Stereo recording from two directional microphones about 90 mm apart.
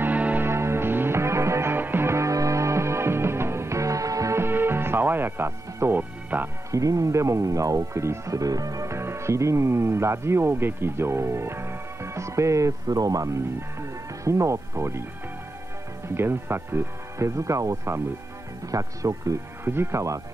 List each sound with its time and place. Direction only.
0.0 s music: 20° right (ahead or behind)
6.7 s speech: 40° right (ahead or behind)
16.2 s speech: 25° right (ahead or behind)